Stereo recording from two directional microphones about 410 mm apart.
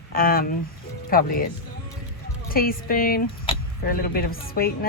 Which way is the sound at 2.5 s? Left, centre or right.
Left.